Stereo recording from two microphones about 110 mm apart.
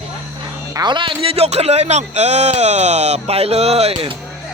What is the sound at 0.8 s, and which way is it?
A man's voice, 45° right (ahead or behind).